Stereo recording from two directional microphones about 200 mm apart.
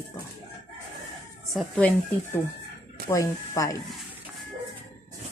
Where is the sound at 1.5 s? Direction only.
5° left (ahead or behind).